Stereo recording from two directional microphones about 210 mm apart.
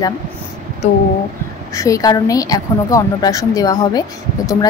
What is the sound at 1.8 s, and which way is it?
A woman's voice, 15° left (ahead or behind).